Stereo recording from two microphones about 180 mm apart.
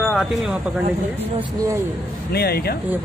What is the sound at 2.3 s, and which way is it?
Speech, 60° left (ahead or behind).